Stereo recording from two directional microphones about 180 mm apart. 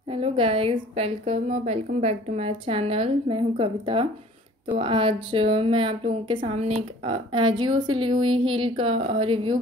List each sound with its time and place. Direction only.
0.1 s a woman's voice: 30° right (ahead or behind)